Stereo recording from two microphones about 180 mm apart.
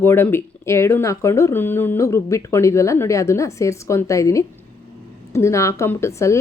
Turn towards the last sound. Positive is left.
turn(degrees=15)  # may be behind; listen again after turning